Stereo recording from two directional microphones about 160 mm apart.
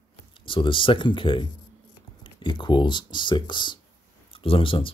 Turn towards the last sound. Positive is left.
turn(degrees=35)  # may be behind; listen again after turning